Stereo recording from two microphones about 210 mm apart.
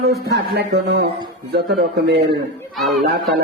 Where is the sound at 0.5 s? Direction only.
50° right (ahead or behind).